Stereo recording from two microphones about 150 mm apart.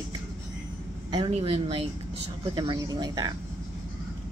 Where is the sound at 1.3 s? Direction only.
40° right (ahead or behind).